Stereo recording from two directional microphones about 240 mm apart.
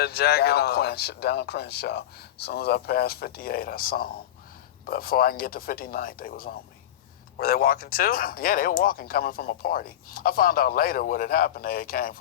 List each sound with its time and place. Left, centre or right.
0.0 s speech: left